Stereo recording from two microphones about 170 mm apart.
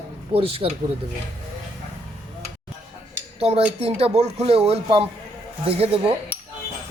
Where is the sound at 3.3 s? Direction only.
35° right (ahead or behind).